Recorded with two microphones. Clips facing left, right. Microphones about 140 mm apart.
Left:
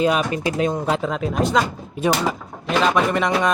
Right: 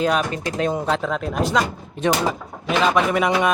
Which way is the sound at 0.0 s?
5° left (ahead or behind).